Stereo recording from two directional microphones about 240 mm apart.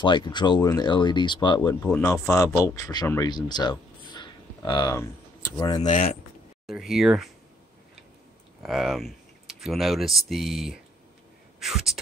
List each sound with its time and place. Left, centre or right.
0.0 s speech: centre
1.9 s speech: centre
5.9 s speech: left
6.6 s speech: centre
8.6 s speech: centre